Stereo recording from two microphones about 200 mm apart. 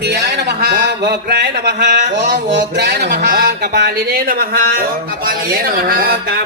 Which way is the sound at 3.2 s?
55° right (ahead or behind).